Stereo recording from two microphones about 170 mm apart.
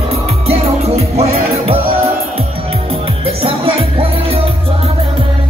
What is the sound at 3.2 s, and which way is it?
Music, 35° right (ahead or behind).